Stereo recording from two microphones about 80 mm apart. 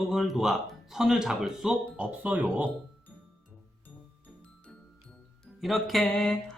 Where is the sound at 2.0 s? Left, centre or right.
Centre.